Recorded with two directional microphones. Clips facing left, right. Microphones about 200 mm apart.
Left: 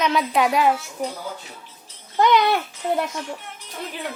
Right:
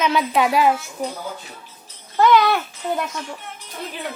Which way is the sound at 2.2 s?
20° left (ahead or behind).